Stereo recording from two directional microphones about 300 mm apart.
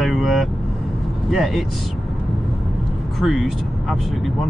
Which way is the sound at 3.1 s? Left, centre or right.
Centre.